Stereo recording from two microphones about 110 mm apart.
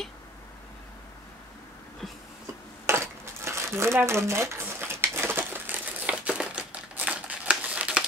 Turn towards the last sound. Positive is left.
turn(degrees=-10)  # may be behind; listen again after turning